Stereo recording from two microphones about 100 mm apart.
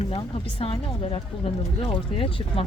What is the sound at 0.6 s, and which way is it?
Speech, 70° left (ahead or behind).